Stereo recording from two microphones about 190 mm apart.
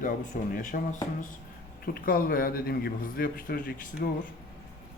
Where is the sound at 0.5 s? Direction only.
45° left (ahead or behind).